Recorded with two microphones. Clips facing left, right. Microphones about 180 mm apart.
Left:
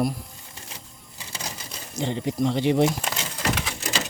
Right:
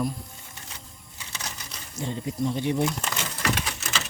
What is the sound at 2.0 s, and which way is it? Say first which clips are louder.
Speech: left 4 dB; 75° left (ahead or behind).